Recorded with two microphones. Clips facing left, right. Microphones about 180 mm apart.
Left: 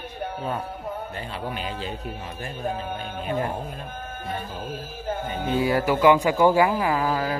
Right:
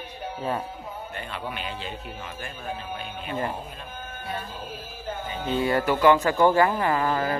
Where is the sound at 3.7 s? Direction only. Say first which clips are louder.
Left 3 dB; 50° left (ahead or behind).